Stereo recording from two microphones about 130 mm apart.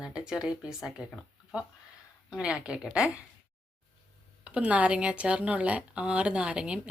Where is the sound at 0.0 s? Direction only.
5° right (ahead or behind).